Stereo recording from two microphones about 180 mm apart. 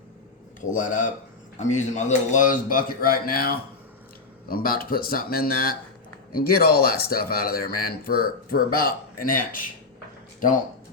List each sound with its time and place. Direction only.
0.6 s a man's voice: 45° left (ahead or behind)